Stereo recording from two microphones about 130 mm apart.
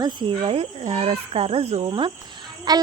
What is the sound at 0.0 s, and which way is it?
Speech, 40° right (ahead or behind).